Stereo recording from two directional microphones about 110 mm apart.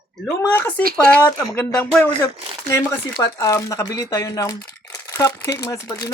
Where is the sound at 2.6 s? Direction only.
25° left (ahead or behind).